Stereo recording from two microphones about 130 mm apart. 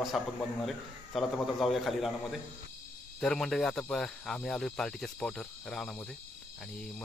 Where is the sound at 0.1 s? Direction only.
Centre (ahead or behind).